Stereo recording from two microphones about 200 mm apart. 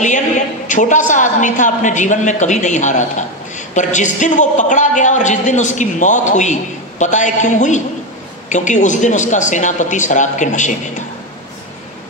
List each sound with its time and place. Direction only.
0.7 s a woman's voice: 40° left (ahead or behind)